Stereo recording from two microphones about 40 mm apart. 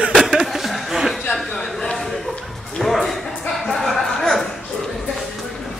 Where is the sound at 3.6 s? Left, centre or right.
Centre.